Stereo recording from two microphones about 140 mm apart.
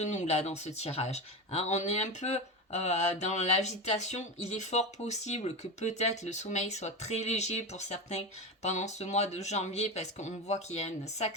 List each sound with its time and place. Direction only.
0.0 s speech: 55° left (ahead or behind)